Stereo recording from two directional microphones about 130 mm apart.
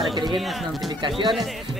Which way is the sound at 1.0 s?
40° right (ahead or behind).